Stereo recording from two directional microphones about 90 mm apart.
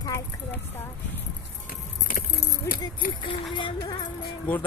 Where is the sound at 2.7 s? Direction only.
35° left (ahead or behind).